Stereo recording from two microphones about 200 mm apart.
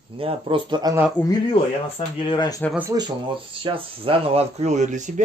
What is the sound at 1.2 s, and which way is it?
Speech, 10° left (ahead or behind).